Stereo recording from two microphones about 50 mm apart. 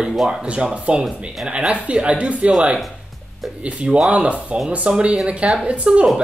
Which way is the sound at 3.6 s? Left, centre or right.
Right.